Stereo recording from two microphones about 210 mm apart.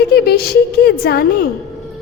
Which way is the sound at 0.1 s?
50° left (ahead or behind).